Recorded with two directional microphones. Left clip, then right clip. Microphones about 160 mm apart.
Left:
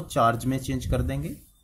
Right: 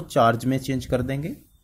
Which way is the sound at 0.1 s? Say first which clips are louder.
Right 3 dB; 25° right (ahead or behind).